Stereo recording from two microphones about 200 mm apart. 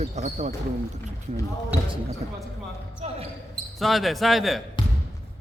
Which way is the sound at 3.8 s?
Centre (ahead or behind).